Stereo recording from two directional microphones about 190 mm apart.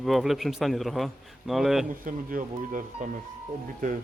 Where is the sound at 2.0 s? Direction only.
45° right (ahead or behind).